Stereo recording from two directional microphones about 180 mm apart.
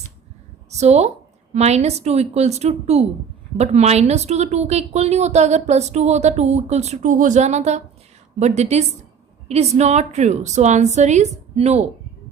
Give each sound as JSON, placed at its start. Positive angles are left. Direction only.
{"t": 0.7, "sound": "a woman's voice", "side_deg": -40}